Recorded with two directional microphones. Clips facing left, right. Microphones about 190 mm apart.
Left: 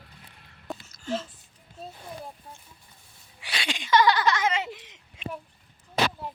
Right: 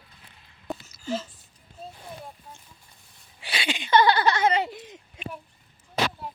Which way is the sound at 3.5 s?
5° right (ahead or behind).